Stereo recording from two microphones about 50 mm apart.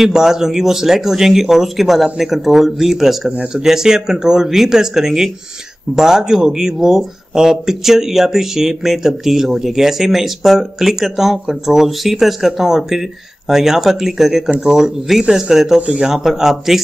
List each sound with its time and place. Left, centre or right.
0.0 s speech: centre
3.3 s speech: centre